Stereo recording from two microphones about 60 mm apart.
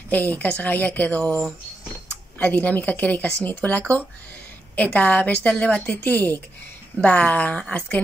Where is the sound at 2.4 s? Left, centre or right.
Left.